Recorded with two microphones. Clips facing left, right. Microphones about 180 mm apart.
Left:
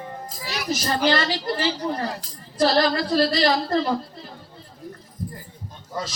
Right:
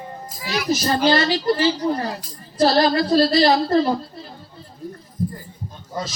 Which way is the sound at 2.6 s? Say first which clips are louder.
Right 3 dB; 30° right (ahead or behind).